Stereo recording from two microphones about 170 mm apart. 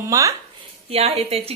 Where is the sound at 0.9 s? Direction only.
35° right (ahead or behind).